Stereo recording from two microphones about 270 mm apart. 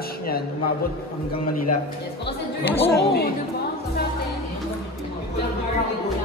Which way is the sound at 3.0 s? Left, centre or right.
Left.